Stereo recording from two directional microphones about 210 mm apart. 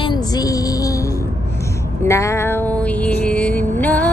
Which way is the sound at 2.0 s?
15° left (ahead or behind).